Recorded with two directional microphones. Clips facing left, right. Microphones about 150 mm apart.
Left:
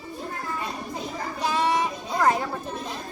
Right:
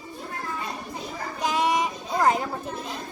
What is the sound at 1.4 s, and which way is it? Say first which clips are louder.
Child singing: even; 15° right (ahead or behind).